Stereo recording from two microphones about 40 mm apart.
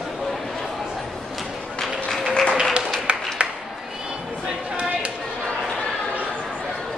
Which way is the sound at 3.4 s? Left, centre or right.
Right.